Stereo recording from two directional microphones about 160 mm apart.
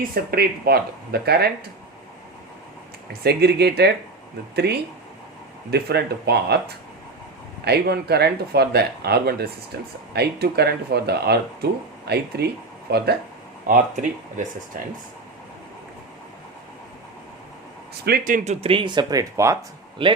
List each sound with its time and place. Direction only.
0.1 s speech: 75° right (ahead or behind)
3.1 s speech: 90° right
7.6 s speech: 90° right
12.9 s speech: 75° right (ahead or behind)
13.7 s a man's voice: 55° right (ahead or behind)
17.9 s a man's voice: 75° right (ahead or behind); by 18.5 s 55° right (ahead or behind)
18.6 s speech: 30° right (ahead or behind)
20.0 s speech: 30° right (ahead or behind)